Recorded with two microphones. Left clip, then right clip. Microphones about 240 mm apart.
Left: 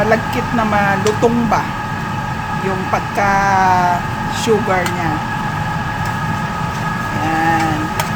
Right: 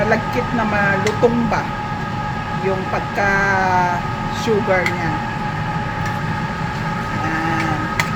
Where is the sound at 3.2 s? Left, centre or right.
Left.